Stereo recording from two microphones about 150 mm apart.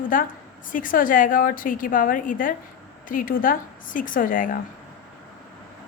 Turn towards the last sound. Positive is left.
turn(degrees=65)  # may be behind; listen again after turning